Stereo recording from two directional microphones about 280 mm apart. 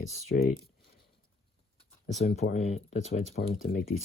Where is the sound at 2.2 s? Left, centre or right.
Left.